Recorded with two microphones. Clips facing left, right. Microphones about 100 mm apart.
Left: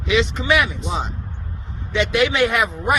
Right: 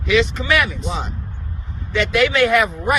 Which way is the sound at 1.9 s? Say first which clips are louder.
Right 1 dB; 20° left (ahead or behind).